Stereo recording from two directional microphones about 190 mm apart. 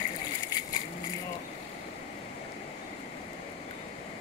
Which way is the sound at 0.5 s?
20° left (ahead or behind).